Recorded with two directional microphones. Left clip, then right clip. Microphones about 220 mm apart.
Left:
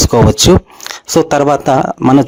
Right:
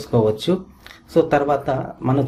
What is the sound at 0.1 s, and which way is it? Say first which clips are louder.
Speech: left 6 dB; 50° left (ahead or behind).